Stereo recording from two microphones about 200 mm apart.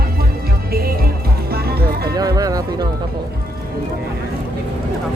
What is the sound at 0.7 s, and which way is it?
Music, 50° right (ahead or behind).